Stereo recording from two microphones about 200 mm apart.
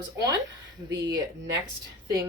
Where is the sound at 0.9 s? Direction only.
20° right (ahead or behind).